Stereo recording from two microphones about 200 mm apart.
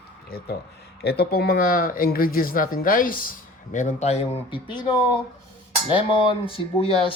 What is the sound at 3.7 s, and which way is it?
Speech, 35° left (ahead or behind).